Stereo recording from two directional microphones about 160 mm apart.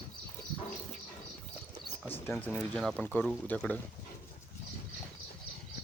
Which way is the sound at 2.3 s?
5° left (ahead or behind).